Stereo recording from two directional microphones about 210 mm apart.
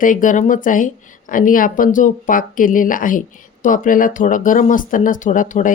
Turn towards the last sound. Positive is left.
turn(degrees=40)  # may be behind; listen again after turning